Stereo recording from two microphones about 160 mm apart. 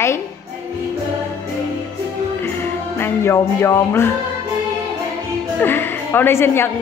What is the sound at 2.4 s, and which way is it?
Music, 15° left (ahead or behind).